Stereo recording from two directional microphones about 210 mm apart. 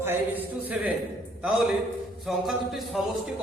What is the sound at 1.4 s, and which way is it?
Speech, centre (ahead or behind).